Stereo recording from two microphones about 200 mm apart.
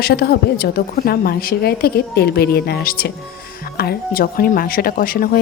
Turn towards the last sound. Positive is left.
turn(degrees=45)  # may be behind; listen again after turning